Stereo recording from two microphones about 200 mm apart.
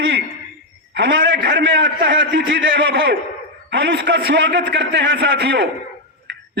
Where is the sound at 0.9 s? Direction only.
60° right (ahead or behind).